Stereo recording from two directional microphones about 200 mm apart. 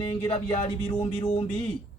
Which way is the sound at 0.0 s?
25° left (ahead or behind).